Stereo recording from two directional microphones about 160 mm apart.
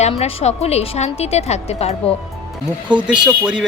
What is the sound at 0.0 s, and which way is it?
A woman's voice, 40° left (ahead or behind).